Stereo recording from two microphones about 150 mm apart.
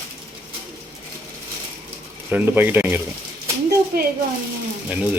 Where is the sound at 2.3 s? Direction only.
15° right (ahead or behind).